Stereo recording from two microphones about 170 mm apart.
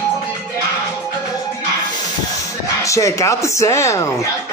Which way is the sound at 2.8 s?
15° left (ahead or behind).